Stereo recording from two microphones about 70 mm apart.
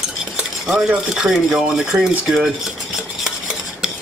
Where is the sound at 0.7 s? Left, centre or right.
Centre.